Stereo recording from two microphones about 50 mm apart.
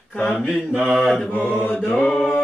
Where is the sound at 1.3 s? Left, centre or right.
Left.